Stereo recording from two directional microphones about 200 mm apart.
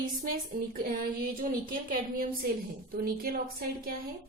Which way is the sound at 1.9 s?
45° right (ahead or behind).